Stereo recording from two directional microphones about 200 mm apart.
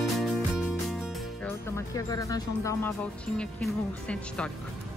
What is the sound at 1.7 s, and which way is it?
Speech, 15° left (ahead or behind).